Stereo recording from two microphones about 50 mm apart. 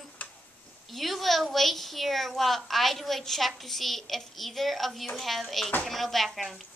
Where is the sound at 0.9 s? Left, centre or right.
Centre.